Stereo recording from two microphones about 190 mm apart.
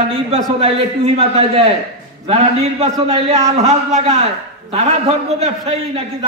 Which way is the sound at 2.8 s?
30° right (ahead or behind).